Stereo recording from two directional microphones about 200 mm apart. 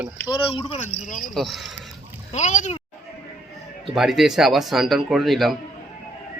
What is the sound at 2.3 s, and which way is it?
Speech, 35° left (ahead or behind).